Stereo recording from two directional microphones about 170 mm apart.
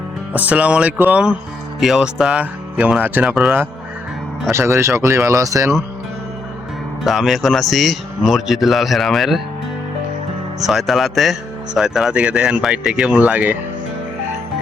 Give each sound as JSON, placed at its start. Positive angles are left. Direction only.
{"t": 0.3, "sound": "speech", "side_deg": -10}
{"t": 4.5, "sound": "speech", "side_deg": -15}
{"t": 7.0, "sound": "speech", "side_deg": 0}
{"t": 10.6, "sound": "speech", "side_deg": 0}